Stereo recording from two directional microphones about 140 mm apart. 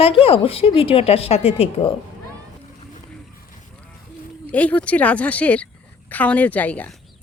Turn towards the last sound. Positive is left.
turn(degrees=10)  # may be behind; listen again after turning